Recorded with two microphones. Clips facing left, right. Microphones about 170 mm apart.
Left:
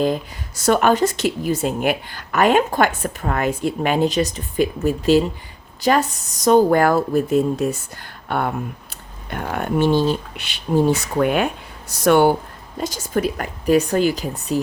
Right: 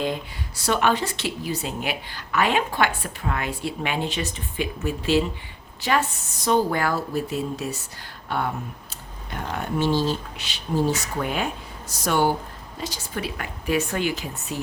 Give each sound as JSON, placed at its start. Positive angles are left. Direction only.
{"t": 0.0, "sound": "speech", "side_deg": 45}
{"t": 12.8, "sound": "a woman's voice", "side_deg": 45}